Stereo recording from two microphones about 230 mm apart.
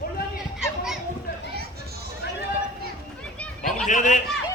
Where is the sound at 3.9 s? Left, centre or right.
Left.